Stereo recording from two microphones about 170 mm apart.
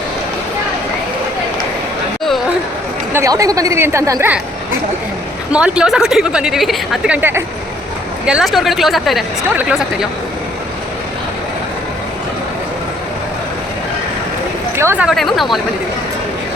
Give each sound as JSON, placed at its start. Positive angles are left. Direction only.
{"t": 3.1, "sound": "speech", "side_deg": -15}
{"t": 5.5, "sound": "a woman's voice", "side_deg": -5}
{"t": 8.3, "sound": "a woman's voice", "side_deg": 0}
{"t": 14.8, "sound": "speech", "side_deg": -15}
{"t": 15.0, "sound": "a woman's voice", "side_deg": 0}